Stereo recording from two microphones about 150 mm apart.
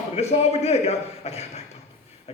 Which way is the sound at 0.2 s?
45° left (ahead or behind).